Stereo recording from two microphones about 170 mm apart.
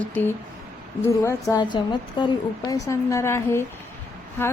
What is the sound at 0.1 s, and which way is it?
A woman's voice, 10° left (ahead or behind).